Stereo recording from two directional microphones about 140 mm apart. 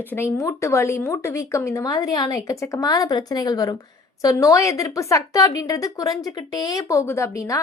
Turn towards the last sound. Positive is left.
turn(degrees=20)  # may be behind; listen again after turning